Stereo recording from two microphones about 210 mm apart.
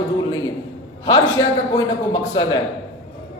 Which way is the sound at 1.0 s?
15° left (ahead or behind).